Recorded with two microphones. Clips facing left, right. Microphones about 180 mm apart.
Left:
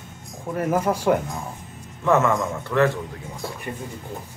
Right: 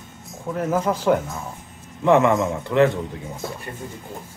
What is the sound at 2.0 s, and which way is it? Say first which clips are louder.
Speech: right 3 dB; 20° right (ahead or behind).